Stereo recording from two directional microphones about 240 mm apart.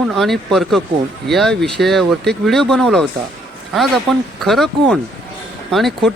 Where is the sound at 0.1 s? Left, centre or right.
Centre.